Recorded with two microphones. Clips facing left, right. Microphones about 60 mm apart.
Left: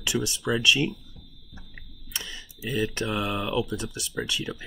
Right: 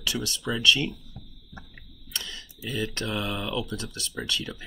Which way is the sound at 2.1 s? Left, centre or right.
Centre.